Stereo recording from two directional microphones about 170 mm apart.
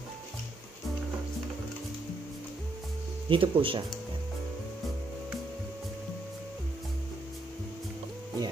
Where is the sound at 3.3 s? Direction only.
30° right (ahead or behind).